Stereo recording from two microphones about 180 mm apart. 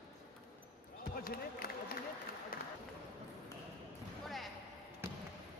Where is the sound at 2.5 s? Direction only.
55° left (ahead or behind).